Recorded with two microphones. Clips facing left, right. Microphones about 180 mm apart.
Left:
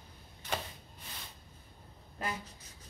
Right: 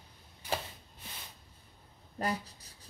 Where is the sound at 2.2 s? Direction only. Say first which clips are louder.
Right 5 dB; 35° right (ahead or behind).